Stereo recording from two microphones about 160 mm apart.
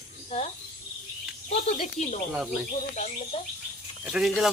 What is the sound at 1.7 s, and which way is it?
Speech, 45° left (ahead or behind).